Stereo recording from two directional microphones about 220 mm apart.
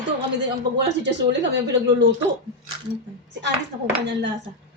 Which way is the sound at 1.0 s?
55° right (ahead or behind).